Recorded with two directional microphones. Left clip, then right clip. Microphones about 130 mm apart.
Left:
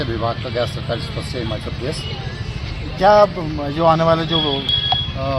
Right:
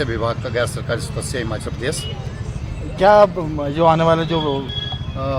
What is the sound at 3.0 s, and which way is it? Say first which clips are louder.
Speech: even; 90° right.